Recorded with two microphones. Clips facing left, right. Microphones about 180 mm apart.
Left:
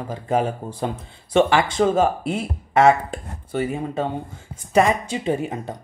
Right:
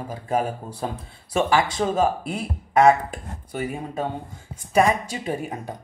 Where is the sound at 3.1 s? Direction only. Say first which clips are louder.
Left 5 dB; 25° left (ahead or behind).